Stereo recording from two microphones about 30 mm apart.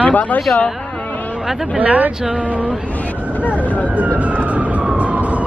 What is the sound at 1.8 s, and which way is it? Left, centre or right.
Speech, right.